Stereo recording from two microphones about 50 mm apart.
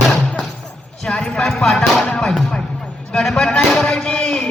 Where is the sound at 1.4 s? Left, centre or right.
Centre.